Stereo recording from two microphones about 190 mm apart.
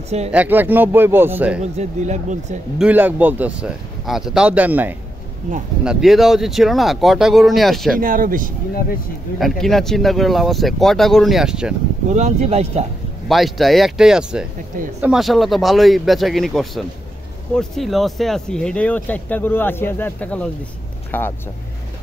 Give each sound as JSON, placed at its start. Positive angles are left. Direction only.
{"t": 0.3, "sound": "speech", "side_deg": -10}
{"t": 1.6, "sound": "speech", "side_deg": -35}
{"t": 2.8, "sound": "speech", "side_deg": -10}
{"t": 8.0, "sound": "speech", "side_deg": -45}
{"t": 9.4, "sound": "speech", "side_deg": 0}
{"t": 12.1, "sound": "speech", "side_deg": -40}
{"t": 13.3, "sound": "speech", "side_deg": 0}